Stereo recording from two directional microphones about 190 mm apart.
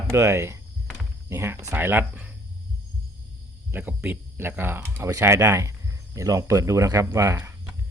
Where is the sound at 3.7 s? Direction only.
10° right (ahead or behind).